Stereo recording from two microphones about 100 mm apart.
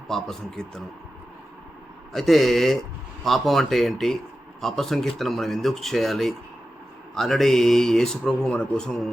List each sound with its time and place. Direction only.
0.1 s speech: 5° left (ahead or behind)
2.1 s speech: centre (ahead or behind)